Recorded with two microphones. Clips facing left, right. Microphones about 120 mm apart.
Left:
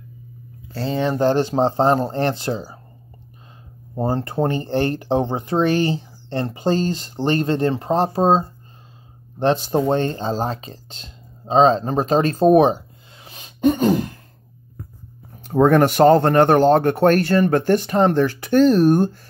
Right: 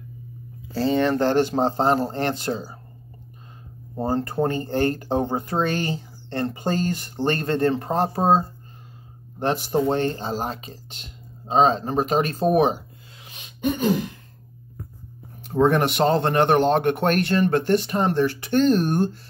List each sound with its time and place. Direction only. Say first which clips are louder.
0.7 s speech: right 2 dB; centre (ahead or behind)
1.1 s speech: left 2 dB; 15° left (ahead or behind)
1.6 s speech: left 3 dB; 35° left (ahead or behind)
3.9 s speech: left 2 dB; 20° left (ahead or behind); by 13.9 s 40° left (ahead or behind)
15.4 s speech: left 5 dB; 45° left (ahead or behind)